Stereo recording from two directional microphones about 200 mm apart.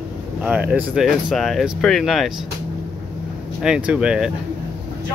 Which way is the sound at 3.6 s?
5° right (ahead or behind).